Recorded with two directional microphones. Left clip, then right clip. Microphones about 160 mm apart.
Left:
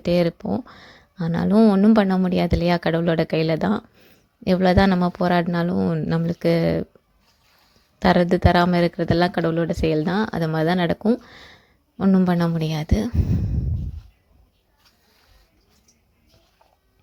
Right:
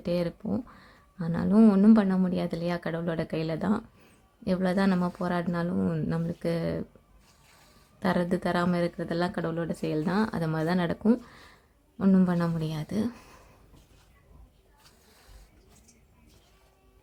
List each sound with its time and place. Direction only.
0.0 s speech: 35° left (ahead or behind)
5.8 s speech: 25° left (ahead or behind)
6.1 s speech: 35° left (ahead or behind)
7.9 s speech: 40° left (ahead or behind)
11.2 s a sound: 35° left (ahead or behind)
12.0 s speech: 30° left (ahead or behind)